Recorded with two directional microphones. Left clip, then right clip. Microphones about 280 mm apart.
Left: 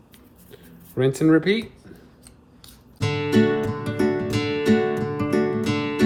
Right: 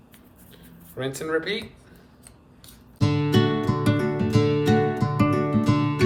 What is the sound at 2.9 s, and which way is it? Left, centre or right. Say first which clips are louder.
Music: left 2 dB; centre.